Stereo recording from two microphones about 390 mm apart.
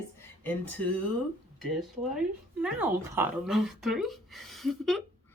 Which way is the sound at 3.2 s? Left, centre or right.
Centre.